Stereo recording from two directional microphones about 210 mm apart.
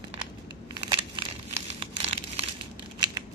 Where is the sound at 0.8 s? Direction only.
25° right (ahead or behind).